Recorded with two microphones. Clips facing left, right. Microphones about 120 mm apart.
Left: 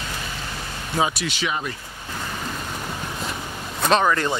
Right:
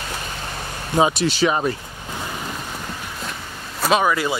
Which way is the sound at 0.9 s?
25° right (ahead or behind).